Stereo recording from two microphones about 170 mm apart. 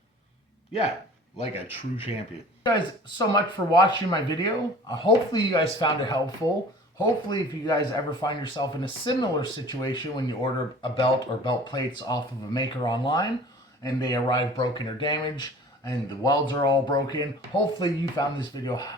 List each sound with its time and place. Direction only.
1.4 s speech: 35° left (ahead or behind)
2.6 s speech: 25° left (ahead or behind)